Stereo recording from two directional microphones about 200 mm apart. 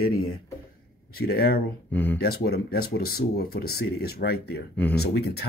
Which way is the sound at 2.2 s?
50° left (ahead or behind).